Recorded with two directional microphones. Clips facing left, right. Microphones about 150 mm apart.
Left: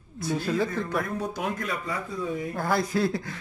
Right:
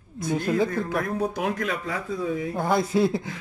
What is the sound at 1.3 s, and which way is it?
Speech, 75° right (ahead or behind).